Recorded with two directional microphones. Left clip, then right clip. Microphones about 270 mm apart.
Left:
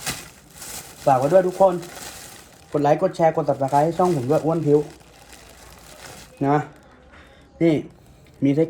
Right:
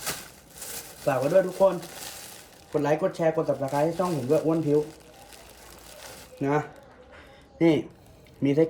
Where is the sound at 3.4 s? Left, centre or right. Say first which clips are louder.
Left 6 dB; left.